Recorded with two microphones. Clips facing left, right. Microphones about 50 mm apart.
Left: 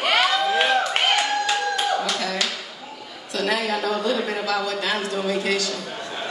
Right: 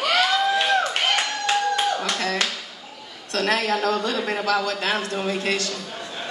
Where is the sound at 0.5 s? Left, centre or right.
Left.